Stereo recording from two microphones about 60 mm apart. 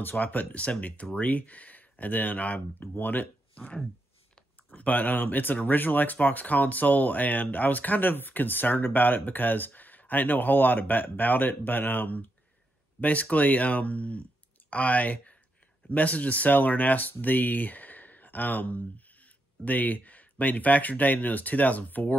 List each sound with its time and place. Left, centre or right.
0.0 s speech: left
3.5 s speech: left